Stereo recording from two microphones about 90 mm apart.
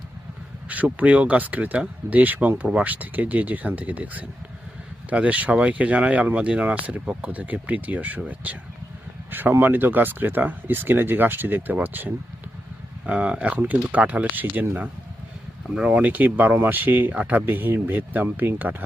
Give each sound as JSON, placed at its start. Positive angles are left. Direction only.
{"t": 0.7, "sound": "speech", "side_deg": -15}
{"t": 9.3, "sound": "speech", "side_deg": -20}